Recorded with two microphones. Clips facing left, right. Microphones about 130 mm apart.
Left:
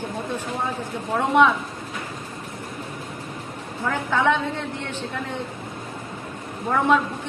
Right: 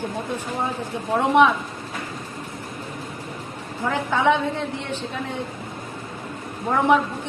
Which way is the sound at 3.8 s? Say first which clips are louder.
Right 1 dB; 15° right (ahead or behind).